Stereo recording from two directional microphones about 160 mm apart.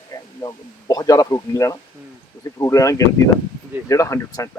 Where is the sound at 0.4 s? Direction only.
25° left (ahead or behind).